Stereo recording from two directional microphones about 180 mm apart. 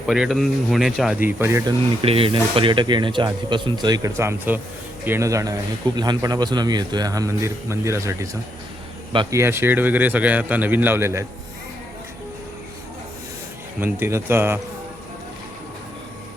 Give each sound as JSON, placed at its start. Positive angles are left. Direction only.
{"t": 0.0, "sound": "speech", "side_deg": 0}
{"t": 1.4, "sound": "speech", "side_deg": -15}
{"t": 2.0, "sound": "speech", "side_deg": -30}
{"t": 13.7, "sound": "speech", "side_deg": -10}